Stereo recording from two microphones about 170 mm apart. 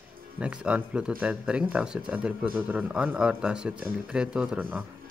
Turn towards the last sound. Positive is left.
turn(degrees=-10)  # may be behind; listen again after turning